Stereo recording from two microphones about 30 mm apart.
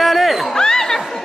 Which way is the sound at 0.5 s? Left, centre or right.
Centre.